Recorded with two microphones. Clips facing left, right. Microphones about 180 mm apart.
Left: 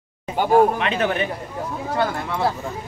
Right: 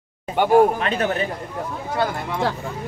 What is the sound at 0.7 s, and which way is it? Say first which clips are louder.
Speech: even; 40° right (ahead or behind).